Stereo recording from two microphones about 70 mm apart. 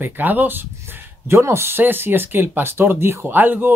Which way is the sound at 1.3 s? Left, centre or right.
Right.